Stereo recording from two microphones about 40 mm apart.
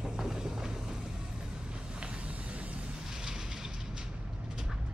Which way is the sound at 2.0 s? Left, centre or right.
Right.